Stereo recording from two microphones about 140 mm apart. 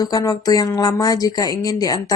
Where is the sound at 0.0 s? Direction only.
25° left (ahead or behind).